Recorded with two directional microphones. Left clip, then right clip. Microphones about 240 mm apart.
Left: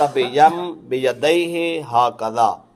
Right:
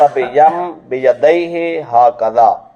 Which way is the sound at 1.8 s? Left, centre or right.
Left.